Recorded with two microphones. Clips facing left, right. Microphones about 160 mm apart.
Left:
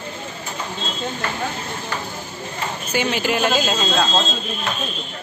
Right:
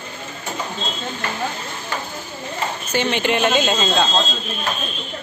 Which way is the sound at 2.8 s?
10° left (ahead or behind).